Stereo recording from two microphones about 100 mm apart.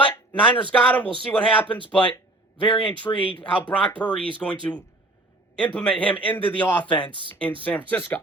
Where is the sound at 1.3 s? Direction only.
20° left (ahead or behind).